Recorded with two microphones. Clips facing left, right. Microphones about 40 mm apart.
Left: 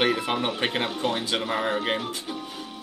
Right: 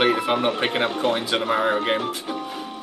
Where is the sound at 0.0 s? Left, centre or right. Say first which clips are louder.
Right 4 dB; centre.